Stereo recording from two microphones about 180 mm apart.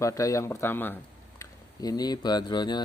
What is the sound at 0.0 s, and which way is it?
Speech, 20° left (ahead or behind).